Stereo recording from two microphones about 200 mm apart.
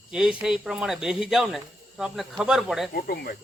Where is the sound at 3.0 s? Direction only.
50° left (ahead or behind).